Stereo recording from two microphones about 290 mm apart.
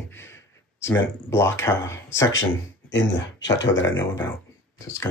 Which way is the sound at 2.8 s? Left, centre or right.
Left.